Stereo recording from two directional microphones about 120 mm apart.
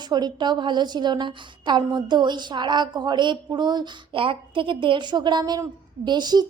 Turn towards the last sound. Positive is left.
turn(degrees=-35)  # may be behind; listen again after turning